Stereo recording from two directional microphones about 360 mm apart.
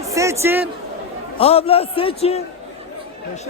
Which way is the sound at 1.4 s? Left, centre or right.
Centre.